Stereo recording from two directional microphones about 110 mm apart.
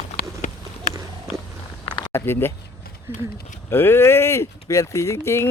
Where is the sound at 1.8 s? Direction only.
45° left (ahead or behind).